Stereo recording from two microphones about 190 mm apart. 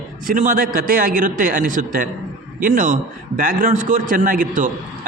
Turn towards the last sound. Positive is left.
turn(degrees=-45)  # may be behind; listen again after turning